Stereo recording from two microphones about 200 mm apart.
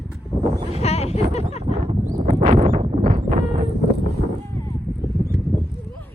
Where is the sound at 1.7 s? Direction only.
35° right (ahead or behind).